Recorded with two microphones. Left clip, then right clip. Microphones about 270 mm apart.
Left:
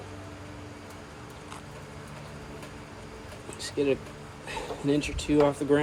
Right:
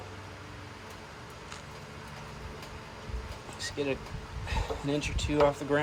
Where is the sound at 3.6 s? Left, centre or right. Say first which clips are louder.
Left 5 dB; right.